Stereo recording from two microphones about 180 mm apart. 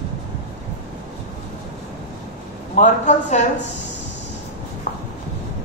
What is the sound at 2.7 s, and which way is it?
Speech, 40° left (ahead or behind).